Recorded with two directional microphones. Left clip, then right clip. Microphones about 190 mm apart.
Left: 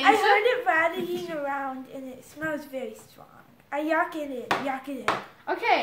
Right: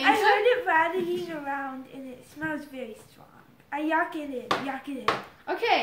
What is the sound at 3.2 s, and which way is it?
A woman's voice, 40° left (ahead or behind).